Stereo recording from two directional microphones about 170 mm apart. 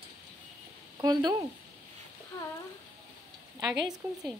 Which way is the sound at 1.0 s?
25° right (ahead or behind).